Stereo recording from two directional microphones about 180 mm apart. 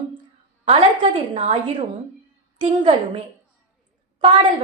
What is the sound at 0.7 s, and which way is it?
A woman's voice, 35° right (ahead or behind).